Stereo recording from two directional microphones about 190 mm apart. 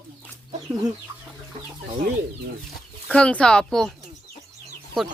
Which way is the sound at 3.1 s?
5° left (ahead or behind).